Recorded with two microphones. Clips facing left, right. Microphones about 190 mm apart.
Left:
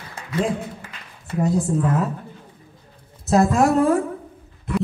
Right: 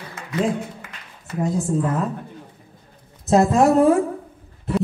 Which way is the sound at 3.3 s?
25° right (ahead or behind).